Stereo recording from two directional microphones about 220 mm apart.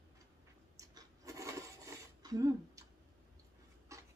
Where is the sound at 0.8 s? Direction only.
15° right (ahead or behind).